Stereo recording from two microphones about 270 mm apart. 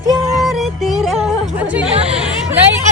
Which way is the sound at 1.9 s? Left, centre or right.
Right.